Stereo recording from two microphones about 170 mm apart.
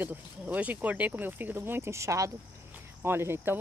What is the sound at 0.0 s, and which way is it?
Speech, 10° right (ahead or behind).